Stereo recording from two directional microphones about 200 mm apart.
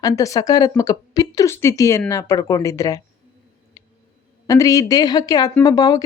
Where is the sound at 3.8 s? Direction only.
15° left (ahead or behind).